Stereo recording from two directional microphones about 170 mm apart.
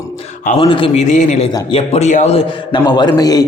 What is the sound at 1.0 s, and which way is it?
A man's voice, 45° left (ahead or behind).